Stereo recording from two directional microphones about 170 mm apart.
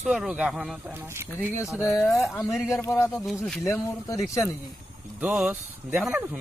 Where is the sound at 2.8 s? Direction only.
10° left (ahead or behind).